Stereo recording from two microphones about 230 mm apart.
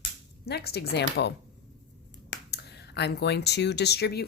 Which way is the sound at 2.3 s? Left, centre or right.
Left.